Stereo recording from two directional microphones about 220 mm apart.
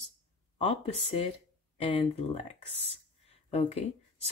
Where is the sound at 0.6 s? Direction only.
25° left (ahead or behind).